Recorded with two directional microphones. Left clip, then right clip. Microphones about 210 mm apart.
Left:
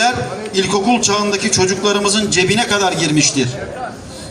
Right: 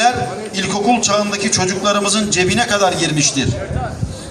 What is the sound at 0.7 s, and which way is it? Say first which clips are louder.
A man's voice: right 2 dB; 25° right (ahead or behind).